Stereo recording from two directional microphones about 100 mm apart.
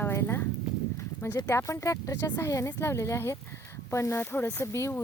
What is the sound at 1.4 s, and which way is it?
Speech, 30° left (ahead or behind).